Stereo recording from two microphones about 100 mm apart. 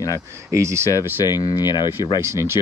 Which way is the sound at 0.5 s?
25° right (ahead or behind).